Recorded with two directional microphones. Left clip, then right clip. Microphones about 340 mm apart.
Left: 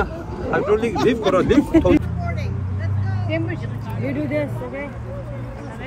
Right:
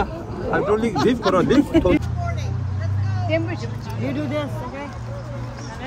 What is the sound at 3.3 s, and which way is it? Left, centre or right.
Vehicle, right.